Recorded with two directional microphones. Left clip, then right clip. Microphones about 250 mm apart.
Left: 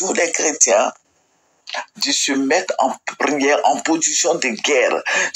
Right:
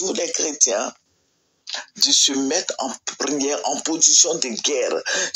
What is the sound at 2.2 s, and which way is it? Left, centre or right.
Speech, left.